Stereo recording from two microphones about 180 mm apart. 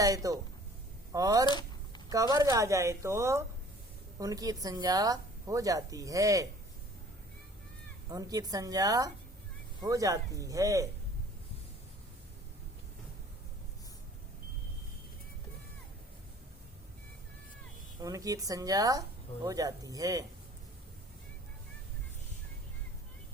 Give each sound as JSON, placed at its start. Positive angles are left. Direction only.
{"t": 0.0, "sound": "speech", "side_deg": -20}
{"t": 1.5, "sound": "a sound", "side_deg": 25}
{"t": 2.0, "sound": "a woman's voice", "side_deg": -20}
{"t": 8.1, "sound": "speech", "side_deg": -20}
{"t": 18.0, "sound": "speech", "side_deg": -20}